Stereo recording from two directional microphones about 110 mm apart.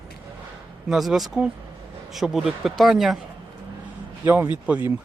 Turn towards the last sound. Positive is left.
turn(degrees=-15)  # may be behind; listen again after turning